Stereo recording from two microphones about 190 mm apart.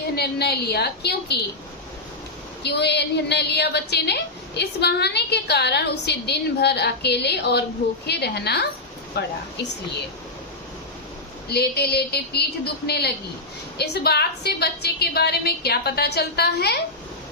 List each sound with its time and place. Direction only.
0.2 s a woman's voice: 55° left (ahead or behind)
2.6 s a woman's voice: 60° left (ahead or behind)
11.4 s a woman's voice: 55° left (ahead or behind)